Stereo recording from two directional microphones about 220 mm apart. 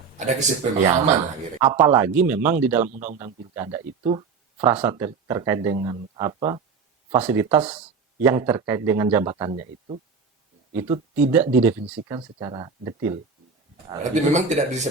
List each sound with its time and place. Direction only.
0.2 s speech: 30° right (ahead or behind)
1.8 s speech: 10° right (ahead or behind)
2.9 s speech: 35° right (ahead or behind)
3.2 s speech: 15° right (ahead or behind)
7.2 s speech: 5° right (ahead or behind)
9.3 s speech: 25° right (ahead or behind)
10.8 s speech: 20° right (ahead or behind)
11.1 s speech: 10° right (ahead or behind)
14.0 s speech: 30° right (ahead or behind)